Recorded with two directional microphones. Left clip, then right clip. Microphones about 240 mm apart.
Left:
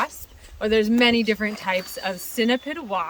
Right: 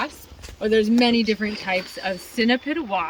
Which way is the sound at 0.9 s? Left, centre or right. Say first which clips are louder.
Left 1 dB; left.